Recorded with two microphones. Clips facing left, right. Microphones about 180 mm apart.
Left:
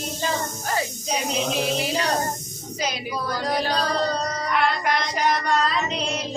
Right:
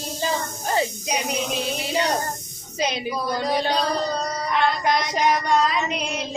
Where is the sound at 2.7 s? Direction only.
25° right (ahead or behind).